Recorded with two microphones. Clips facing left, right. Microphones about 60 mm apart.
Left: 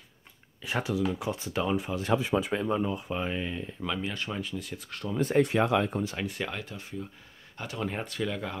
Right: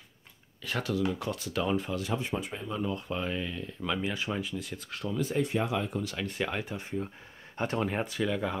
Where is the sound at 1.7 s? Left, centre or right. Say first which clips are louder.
Left 5 dB; centre.